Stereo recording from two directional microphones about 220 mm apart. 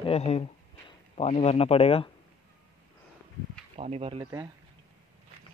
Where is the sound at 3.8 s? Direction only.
25° right (ahead or behind).